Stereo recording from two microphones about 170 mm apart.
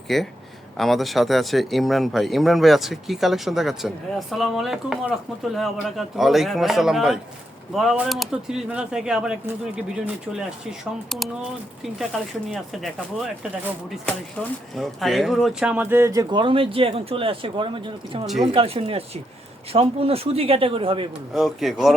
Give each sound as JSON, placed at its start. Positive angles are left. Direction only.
{"t": 0.1, "sound": "speech", "side_deg": 0}
{"t": 14.8, "sound": "speech", "side_deg": 0}
{"t": 21.3, "sound": "speech", "side_deg": 0}